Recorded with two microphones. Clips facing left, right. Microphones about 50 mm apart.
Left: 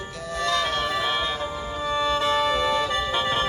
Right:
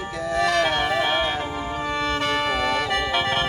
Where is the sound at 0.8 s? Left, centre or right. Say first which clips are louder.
Right 3 dB; centre.